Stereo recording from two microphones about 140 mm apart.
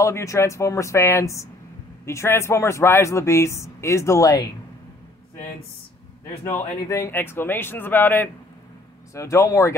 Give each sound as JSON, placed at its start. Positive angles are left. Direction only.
{"t": 0.0, "sound": "speech", "side_deg": 20}
{"t": 6.2, "sound": "speech", "side_deg": 20}